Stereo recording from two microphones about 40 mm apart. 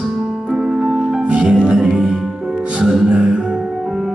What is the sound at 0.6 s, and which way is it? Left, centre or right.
Keyboard, right.